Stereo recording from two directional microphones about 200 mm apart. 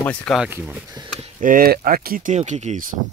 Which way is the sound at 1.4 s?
45° right (ahead or behind).